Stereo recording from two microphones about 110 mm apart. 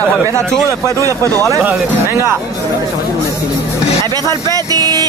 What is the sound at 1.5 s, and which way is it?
Speech, 25° right (ahead or behind).